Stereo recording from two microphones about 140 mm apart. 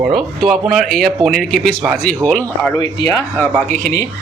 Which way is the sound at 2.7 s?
25° left (ahead or behind).